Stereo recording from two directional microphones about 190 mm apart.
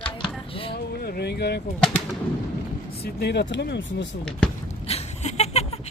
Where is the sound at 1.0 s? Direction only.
55° left (ahead or behind).